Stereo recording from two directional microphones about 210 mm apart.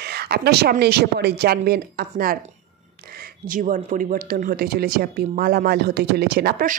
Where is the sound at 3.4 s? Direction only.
40° right (ahead or behind).